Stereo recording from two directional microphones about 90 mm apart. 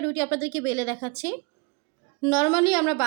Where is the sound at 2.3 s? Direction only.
60° left (ahead or behind).